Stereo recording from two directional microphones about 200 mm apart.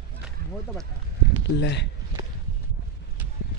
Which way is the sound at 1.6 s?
60° left (ahead or behind).